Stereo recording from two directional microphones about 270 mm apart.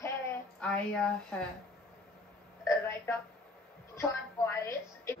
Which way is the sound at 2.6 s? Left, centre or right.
Centre.